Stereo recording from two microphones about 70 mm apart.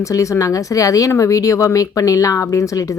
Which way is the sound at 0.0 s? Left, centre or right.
Left.